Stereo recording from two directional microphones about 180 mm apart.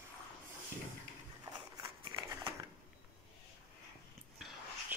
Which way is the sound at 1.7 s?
25° right (ahead or behind).